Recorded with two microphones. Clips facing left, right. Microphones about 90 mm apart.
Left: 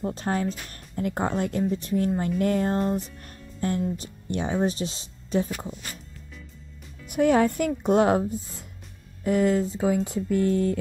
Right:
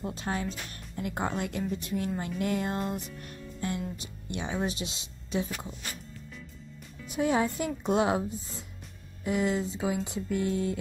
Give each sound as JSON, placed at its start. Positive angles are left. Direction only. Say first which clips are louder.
{"t": 0.0, "sound": "speech", "louder": "left 6 dB", "side_deg": 45}
{"t": 7.1, "sound": "speech", "louder": "left 7 dB", "side_deg": 55}
{"t": 9.2, "sound": "speech", "louder": "left 6 dB", "side_deg": 45}